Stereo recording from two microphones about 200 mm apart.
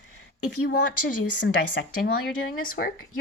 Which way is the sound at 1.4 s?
50° left (ahead or behind).